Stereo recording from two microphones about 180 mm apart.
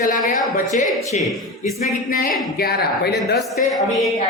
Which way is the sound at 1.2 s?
Centre (ahead or behind).